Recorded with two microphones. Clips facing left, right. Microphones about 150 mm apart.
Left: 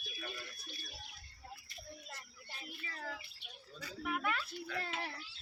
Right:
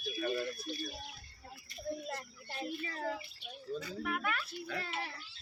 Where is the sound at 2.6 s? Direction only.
35° right (ahead or behind).